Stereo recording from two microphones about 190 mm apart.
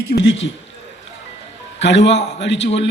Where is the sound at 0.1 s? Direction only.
70° left (ahead or behind).